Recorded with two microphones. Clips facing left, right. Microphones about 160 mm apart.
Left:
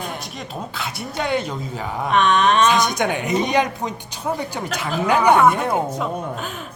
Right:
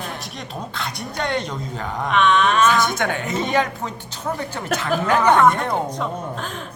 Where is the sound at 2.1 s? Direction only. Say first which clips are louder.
Left 1 dB; 40° left (ahead or behind).